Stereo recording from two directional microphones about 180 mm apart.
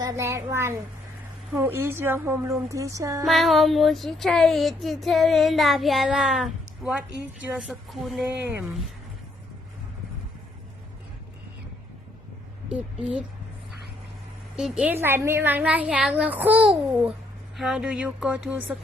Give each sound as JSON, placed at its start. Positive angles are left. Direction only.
{"t": 0.0, "sound": "a child's voice", "side_deg": -15}
{"t": 1.5, "sound": "a woman's voice", "side_deg": -15}
{"t": 3.2, "sound": "speech", "side_deg": 0}
{"t": 12.6, "sound": "a woman's voice", "side_deg": -5}
{"t": 14.5, "sound": "a woman's voice", "side_deg": -5}